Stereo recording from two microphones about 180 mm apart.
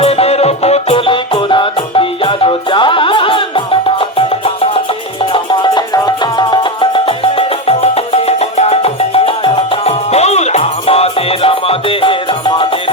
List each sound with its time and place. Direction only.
0.0 s music: 35° left (ahead or behind)